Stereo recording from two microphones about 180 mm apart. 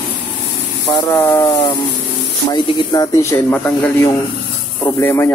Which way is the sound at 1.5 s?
30° left (ahead or behind).